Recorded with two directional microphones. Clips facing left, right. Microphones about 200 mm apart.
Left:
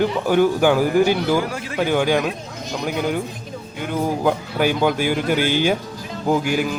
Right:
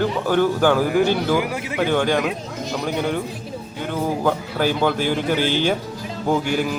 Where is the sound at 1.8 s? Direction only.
10° left (ahead or behind).